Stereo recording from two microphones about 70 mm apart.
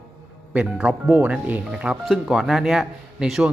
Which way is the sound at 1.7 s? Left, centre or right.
Centre.